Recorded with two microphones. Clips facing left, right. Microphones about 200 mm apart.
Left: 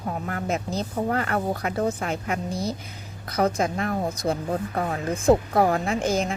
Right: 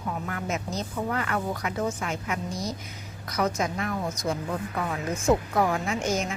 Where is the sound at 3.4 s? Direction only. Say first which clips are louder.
Left 4 dB; 30° left (ahead or behind).